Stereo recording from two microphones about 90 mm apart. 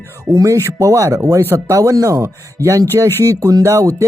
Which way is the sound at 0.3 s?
35° right (ahead or behind).